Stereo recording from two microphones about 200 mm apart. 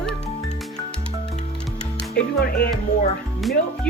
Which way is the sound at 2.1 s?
55° left (ahead or behind).